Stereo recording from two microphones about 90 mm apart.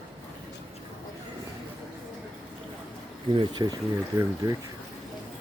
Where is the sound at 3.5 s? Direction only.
50° right (ahead or behind).